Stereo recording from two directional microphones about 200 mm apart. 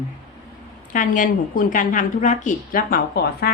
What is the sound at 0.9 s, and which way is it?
Speech, 40° left (ahead or behind).